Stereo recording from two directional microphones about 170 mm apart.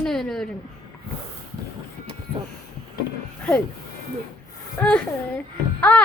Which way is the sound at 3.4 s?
5° left (ahead or behind).